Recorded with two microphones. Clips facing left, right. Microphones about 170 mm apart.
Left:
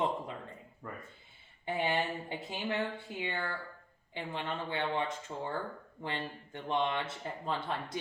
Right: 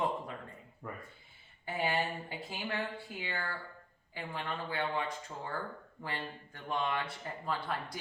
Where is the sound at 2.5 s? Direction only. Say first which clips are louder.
Left 3 dB; 20° left (ahead or behind).